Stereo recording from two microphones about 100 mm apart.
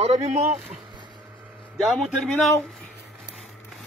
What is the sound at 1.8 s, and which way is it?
Speech, centre (ahead or behind).